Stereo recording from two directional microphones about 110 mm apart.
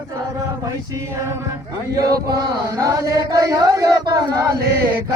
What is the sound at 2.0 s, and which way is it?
Chant, 35° right (ahead or behind).